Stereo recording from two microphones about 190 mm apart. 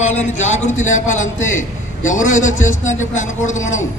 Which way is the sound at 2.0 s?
40° left (ahead or behind).